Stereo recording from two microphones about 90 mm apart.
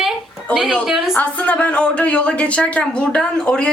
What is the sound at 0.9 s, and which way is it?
Speech, 5° right (ahead or behind).